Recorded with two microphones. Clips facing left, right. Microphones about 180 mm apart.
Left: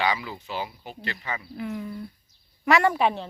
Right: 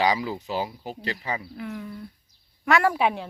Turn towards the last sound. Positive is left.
turn(degrees=-10)  # may be behind; listen again after turning